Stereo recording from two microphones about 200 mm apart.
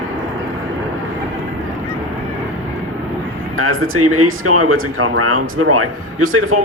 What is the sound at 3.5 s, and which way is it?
Speech, 90° right.